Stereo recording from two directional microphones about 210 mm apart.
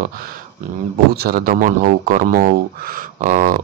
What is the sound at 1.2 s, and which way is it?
Speech, 45° right (ahead or behind).